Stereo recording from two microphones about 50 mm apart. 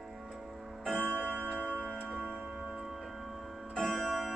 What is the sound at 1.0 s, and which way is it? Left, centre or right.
Tick-tock, left.